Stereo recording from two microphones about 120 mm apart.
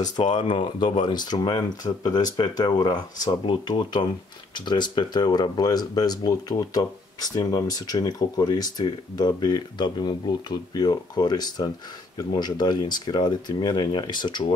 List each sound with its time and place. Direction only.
0.0 s speech: 35° left (ahead or behind)